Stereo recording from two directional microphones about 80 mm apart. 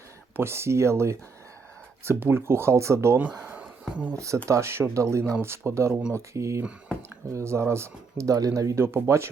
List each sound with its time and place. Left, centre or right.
0.3 s speech: right
3.5 s a sound: centre
4.4 s speech: right
5.9 s speech: centre
6.1 s speech: right